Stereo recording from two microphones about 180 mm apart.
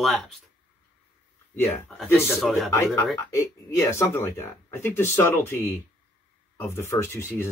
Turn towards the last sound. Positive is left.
turn(degrees=15)  # may be behind; listen again after turning